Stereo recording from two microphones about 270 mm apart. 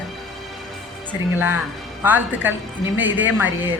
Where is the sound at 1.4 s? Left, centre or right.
Centre.